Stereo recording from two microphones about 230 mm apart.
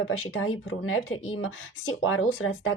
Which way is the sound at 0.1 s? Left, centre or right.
Left.